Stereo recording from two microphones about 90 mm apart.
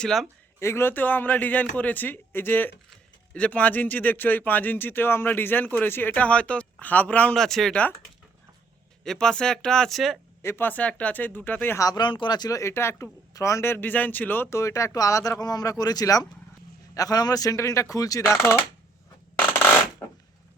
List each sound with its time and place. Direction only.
0.0 s speech: centre (ahead or behind)
0.6 s speech: 30° left (ahead or behind)
7.3 s speech: 5° left (ahead or behind)
9.0 s speech: 10° left (ahead or behind)
10.4 s speech: 25° left (ahead or behind)
11.8 s speech: 45° left (ahead or behind)
12.0 s speech: 60° left (ahead or behind); by 14.6 s 20° left (ahead or behind)
14.6 s speech: 35° left (ahead or behind)